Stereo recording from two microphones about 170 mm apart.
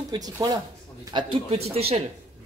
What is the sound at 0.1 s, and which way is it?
Speech, 25° right (ahead or behind).